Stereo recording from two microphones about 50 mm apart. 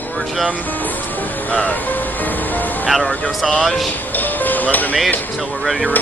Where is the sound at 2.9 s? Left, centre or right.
Centre.